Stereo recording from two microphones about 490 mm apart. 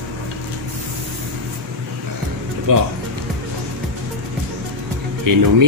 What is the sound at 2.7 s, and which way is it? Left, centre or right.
Speech, right.